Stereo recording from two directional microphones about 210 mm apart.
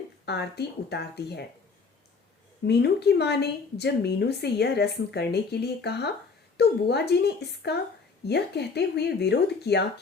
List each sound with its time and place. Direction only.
0.3 s a woman's voice: 50° left (ahead or behind)
2.6 s a woman's voice: 50° left (ahead or behind)